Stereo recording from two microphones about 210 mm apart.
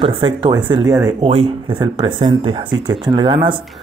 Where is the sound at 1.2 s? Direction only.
30° right (ahead or behind).